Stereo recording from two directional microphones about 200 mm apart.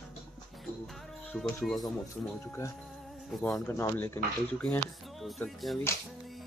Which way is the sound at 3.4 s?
10° left (ahead or behind).